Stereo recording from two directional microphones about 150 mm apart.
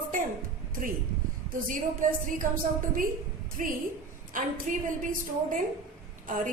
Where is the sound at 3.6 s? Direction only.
60° right (ahead or behind).